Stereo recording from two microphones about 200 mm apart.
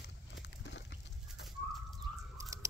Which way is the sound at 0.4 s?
60° left (ahead or behind).